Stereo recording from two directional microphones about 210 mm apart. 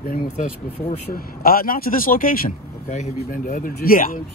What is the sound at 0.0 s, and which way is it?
Speech, 45° left (ahead or behind).